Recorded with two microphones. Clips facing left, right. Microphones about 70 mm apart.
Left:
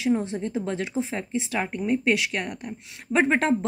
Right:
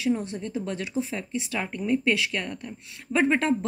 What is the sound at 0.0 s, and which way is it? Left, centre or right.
Speech, left.